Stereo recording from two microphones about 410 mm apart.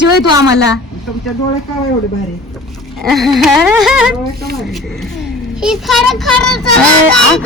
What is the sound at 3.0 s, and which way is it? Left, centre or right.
Child singing, centre.